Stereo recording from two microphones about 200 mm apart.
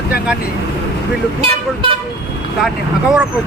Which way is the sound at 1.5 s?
25° right (ahead or behind).